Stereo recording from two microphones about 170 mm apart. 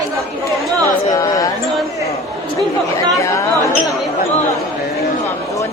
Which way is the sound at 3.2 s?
20° left (ahead or behind).